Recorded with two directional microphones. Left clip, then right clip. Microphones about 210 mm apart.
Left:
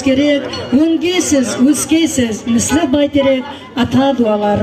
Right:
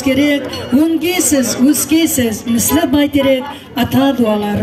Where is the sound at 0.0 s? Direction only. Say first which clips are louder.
Left 1 dB; 55° right (ahead or behind).